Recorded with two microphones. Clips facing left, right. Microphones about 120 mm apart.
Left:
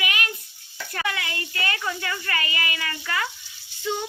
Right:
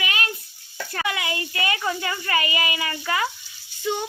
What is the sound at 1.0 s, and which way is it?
A woman's voice, 15° right (ahead or behind).